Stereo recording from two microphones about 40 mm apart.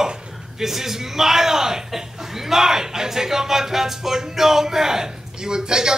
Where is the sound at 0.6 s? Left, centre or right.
Centre.